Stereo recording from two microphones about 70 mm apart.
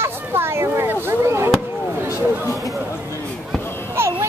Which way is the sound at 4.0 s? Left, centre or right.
Right.